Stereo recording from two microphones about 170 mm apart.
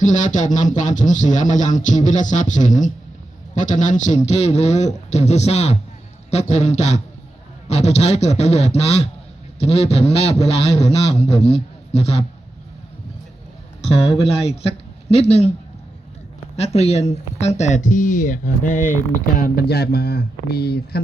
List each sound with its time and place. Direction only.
0.0 s a man's voice: 45° left (ahead or behind)
13.8 s a man's voice: 35° left (ahead or behind)
16.6 s speech: 40° left (ahead or behind)
19.4 s speech: 65° left (ahead or behind)